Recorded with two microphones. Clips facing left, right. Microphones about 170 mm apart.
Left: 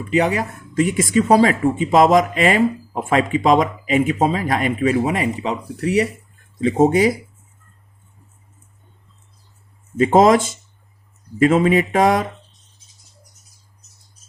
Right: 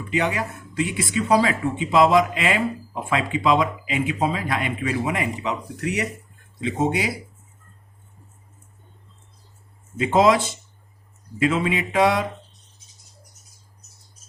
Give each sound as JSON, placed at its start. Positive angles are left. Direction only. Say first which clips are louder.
{"t": 0.1, "sound": "speech", "louder": "left 6 dB", "side_deg": 40}
{"t": 6.6, "sound": "speech", "louder": "left 9 dB", "side_deg": 45}
{"t": 10.0, "sound": "speech", "louder": "left 5 dB", "side_deg": 45}